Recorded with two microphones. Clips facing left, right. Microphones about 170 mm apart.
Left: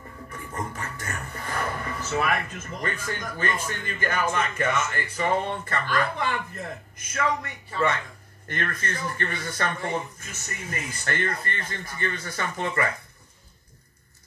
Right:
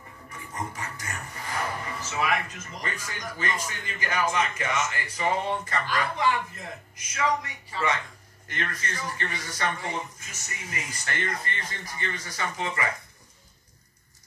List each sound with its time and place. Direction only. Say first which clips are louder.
0.7 s speech: left 2 dB; 55° left (ahead or behind)